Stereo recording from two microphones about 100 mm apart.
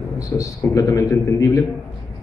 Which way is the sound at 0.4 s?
30° left (ahead or behind).